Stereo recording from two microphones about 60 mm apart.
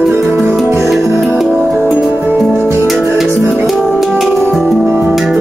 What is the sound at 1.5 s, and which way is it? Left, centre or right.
Music, right.